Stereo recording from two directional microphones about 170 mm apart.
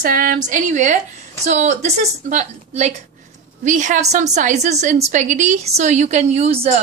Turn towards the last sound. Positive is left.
turn(degrees=-35)  # may be behind; listen again after turning